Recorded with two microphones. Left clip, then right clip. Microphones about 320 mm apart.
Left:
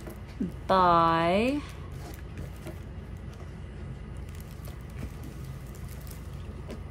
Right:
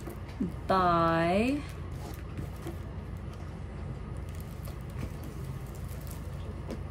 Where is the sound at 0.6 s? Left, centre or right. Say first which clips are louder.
Left 4 dB; centre.